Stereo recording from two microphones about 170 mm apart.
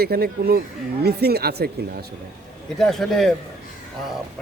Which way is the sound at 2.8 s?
Centre (ahead or behind).